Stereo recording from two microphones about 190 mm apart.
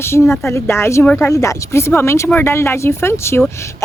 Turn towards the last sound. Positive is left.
turn(degrees=15)  # may be behind; listen again after turning